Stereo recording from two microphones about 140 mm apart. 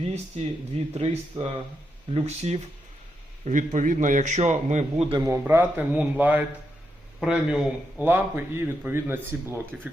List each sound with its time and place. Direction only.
0.0 s speech: 50° right (ahead or behind)
3.4 s a man's voice: 60° right (ahead or behind)
5.2 s a man's voice: 20° right (ahead or behind)